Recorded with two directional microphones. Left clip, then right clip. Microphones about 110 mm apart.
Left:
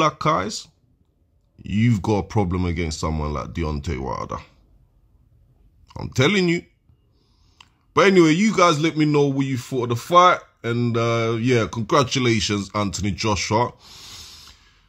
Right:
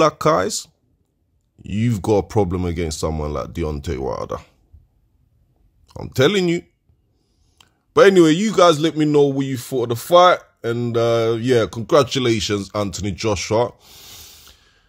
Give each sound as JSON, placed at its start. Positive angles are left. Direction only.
{"t": 0.0, "sound": "speech", "side_deg": -90}
{"t": 1.6, "sound": "a man's voice", "side_deg": -50}
{"t": 5.9, "sound": "a man's voice", "side_deg": -45}
{"t": 13.7, "sound": "a sound", "side_deg": -30}